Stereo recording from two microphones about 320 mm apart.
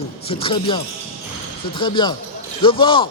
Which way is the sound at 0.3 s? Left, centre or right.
Centre.